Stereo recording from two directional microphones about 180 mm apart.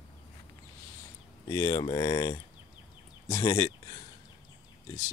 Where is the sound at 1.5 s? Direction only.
20° left (ahead or behind).